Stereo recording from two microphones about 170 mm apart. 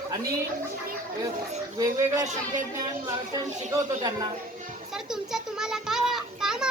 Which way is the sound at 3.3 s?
20° right (ahead or behind).